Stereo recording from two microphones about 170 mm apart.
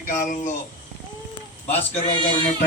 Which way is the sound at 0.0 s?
50° left (ahead or behind).